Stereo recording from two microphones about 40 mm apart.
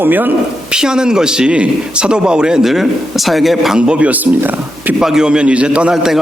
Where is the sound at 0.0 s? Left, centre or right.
Right.